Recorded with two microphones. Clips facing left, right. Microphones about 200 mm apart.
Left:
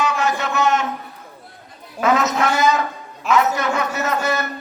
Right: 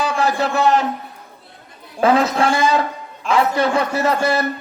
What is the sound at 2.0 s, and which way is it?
A man's voice, 30° right (ahead or behind).